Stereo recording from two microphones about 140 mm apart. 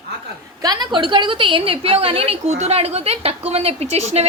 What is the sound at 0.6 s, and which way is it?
A woman's voice, 30° right (ahead or behind).